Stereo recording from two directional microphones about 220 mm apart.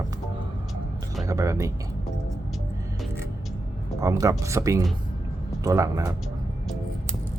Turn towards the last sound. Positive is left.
turn(degrees=-15)  # may be behind; listen again after turning